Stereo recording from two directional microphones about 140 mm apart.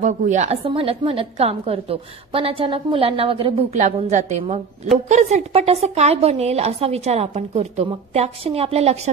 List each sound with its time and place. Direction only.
0.0 s a woman's voice: 60° right (ahead or behind)
0.7 s a woman's voice: 45° right (ahead or behind)
3.7 s a woman's voice: 55° right (ahead or behind)